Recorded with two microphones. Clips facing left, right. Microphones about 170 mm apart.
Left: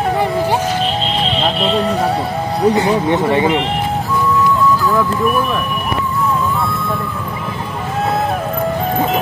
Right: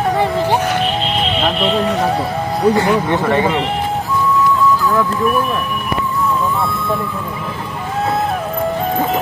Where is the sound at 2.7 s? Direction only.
20° left (ahead or behind).